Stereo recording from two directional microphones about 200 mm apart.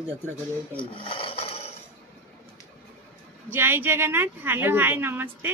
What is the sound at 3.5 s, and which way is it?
A woman's voice, 10° right (ahead or behind).